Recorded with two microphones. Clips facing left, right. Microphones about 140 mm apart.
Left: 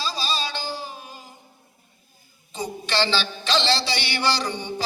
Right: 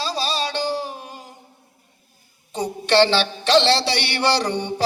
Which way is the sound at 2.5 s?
65° right (ahead or behind).